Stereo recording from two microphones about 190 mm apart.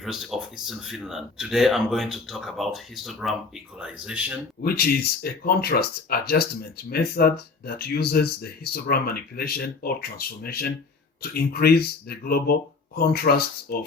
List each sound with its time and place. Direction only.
0.0 s speech: centre (ahead or behind)
4.6 s speech: 50° left (ahead or behind)